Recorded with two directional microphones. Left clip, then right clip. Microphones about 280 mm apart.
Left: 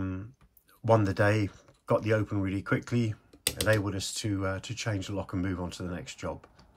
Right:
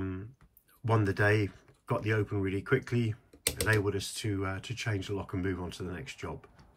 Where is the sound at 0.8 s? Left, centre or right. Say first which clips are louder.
Left 4 dB; centre.